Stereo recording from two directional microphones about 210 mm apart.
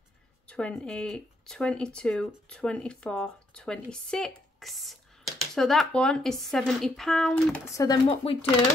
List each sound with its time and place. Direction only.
0.5 s speech: 5° left (ahead or behind)
7.6 s speech: 15° left (ahead or behind)